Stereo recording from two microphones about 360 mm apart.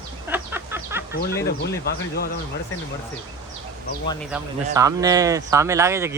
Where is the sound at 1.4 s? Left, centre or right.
Left.